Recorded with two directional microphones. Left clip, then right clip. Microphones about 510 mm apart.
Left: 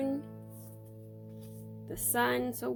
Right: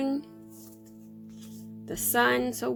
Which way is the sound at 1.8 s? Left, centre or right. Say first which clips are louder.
Right 6 dB; centre.